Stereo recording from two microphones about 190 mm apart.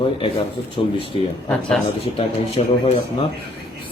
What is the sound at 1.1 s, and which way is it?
Speech, 30° left (ahead or behind).